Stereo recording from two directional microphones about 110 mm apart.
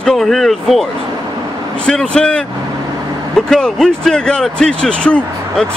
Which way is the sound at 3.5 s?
5° left (ahead or behind).